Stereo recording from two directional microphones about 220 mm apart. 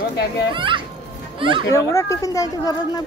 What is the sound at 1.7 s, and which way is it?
Speech, 15° left (ahead or behind).